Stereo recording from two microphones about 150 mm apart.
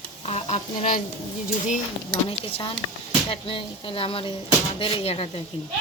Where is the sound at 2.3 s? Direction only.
40° left (ahead or behind).